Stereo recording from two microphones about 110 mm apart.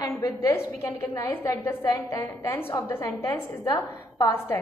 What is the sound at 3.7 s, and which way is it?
Speech, 35° left (ahead or behind).